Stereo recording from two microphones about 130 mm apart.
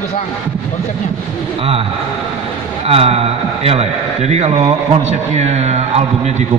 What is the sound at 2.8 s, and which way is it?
A man's voice, 50° right (ahead or behind).